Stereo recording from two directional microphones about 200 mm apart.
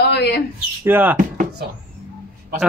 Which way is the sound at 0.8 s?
10° right (ahead or behind).